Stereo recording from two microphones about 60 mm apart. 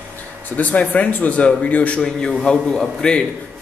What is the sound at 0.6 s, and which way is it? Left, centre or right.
Speech, left.